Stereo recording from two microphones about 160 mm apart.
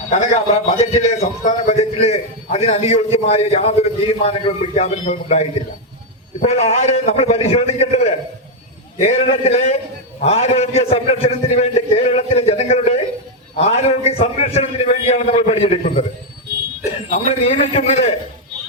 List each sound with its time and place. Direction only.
0.8 s a man's voice: 45° left (ahead or behind)
17.1 s a man's voice: 40° left (ahead or behind)